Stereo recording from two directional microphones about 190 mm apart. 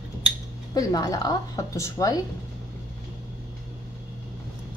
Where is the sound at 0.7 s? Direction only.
20° left (ahead or behind).